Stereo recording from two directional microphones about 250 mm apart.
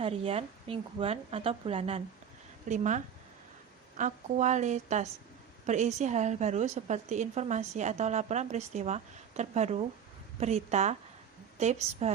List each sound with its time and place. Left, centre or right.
0.0 s a woman's voice: right